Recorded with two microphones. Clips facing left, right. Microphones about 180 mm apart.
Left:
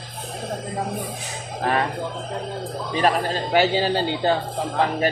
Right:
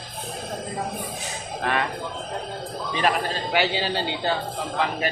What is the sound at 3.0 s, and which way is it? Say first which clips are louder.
Speech: left 3 dB; 40° left (ahead or behind).